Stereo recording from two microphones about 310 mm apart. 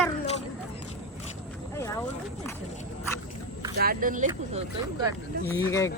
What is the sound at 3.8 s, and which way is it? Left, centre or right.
Speech, right.